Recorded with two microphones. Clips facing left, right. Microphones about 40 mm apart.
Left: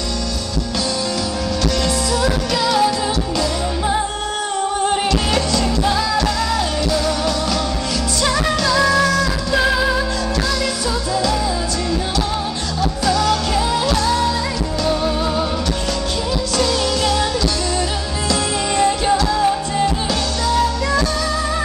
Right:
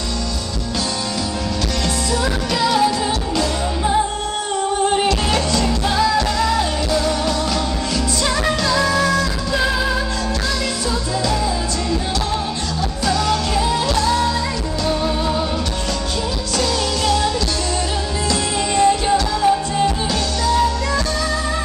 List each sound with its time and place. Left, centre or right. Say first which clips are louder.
2.2 s music: even; centre
4.8 s music: right 1 dB; centre
8.5 s music: left 2 dB; centre
13.0 s music: left 1 dB; centre
16.5 s music: left 1 dB; centre
18.3 s music: left 1 dB; centre